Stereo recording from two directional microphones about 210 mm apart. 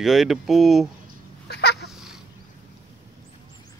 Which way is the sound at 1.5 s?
50° left (ahead or behind).